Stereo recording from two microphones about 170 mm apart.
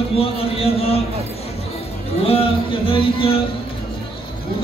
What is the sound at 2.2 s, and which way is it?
Speech, 35° left (ahead or behind).